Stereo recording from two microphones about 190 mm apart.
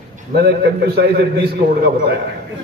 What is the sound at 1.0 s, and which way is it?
Speech, 55° right (ahead or behind).